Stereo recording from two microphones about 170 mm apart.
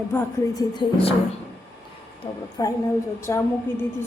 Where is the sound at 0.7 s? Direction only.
30° left (ahead or behind).